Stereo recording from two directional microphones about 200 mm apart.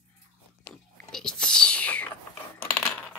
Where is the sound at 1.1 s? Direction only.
5° left (ahead or behind).